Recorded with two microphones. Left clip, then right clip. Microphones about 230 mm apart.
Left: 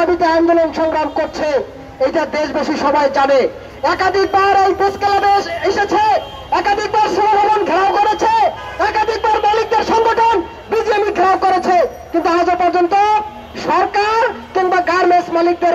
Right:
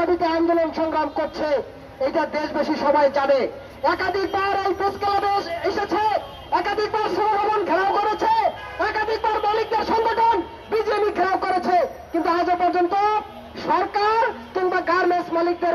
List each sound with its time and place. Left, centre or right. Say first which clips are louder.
0.0 s speech: left 7 dB; left